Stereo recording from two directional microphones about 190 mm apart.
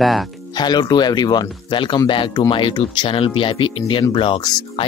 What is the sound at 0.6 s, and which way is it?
Speech, 20° left (ahead or behind).